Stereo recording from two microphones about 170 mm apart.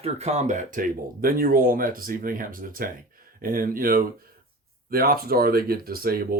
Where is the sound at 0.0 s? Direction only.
40° right (ahead or behind).